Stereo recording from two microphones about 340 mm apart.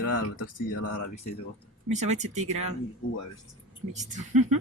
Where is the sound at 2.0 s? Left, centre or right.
Right.